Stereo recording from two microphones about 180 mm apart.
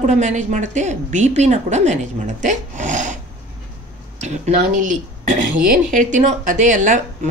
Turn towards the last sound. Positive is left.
turn(degrees=-45)  # may be behind; listen again after turning